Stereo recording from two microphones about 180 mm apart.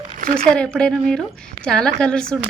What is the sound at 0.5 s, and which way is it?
A woman's voice, 5° left (ahead or behind).